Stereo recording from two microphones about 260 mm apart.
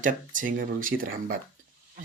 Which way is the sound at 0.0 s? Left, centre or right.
Right.